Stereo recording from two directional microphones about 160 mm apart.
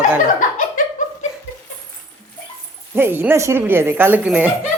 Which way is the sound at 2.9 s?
15° right (ahead or behind).